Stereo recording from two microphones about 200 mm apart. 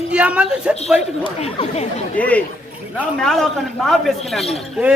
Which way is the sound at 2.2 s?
5° left (ahead or behind).